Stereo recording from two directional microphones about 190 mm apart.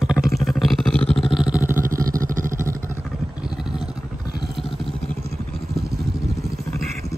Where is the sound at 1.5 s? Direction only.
10° right (ahead or behind).